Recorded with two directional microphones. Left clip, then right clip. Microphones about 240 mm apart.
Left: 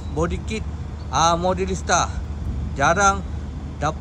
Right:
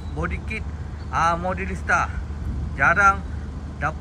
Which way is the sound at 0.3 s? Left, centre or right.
Left.